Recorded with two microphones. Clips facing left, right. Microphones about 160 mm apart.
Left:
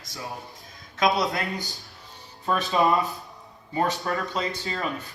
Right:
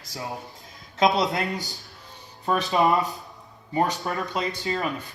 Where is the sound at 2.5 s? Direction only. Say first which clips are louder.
Right 1 dB; 15° right (ahead or behind).